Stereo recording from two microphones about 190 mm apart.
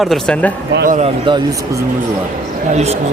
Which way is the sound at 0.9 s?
40° right (ahead or behind).